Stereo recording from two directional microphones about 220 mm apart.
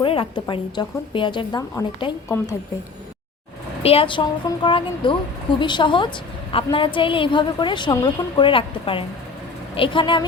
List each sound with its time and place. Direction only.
0.0 s a woman's voice: 25° left (ahead or behind)
3.8 s a woman's voice: 25° left (ahead or behind)